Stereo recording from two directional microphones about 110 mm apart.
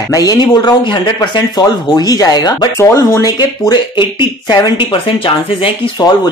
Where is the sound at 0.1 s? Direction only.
35° left (ahead or behind).